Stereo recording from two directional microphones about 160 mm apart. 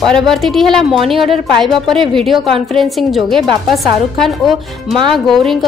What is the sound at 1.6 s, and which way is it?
A woman's voice, centre (ahead or behind).